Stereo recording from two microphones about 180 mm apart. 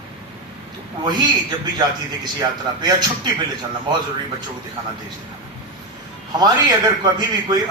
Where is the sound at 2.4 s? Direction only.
25° right (ahead or behind).